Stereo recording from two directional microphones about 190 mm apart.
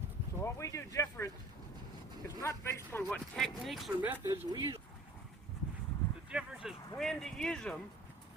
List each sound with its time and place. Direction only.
0.3 s a sound: 15° left (ahead or behind)
2.2 s speech: 15° left (ahead or behind); by 4.8 s 20° right (ahead or behind)
6.3 s speech: 5° right (ahead or behind)